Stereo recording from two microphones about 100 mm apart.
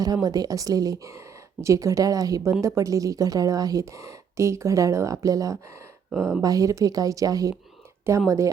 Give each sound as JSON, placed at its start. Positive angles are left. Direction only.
{"t": 0.0, "sound": "a woman's voice", "side_deg": -40}